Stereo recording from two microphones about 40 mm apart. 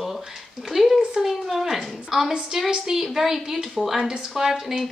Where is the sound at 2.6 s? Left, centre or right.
Centre.